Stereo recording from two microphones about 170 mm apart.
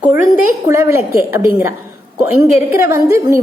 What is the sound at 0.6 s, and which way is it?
A woman's voice, 15° right (ahead or behind).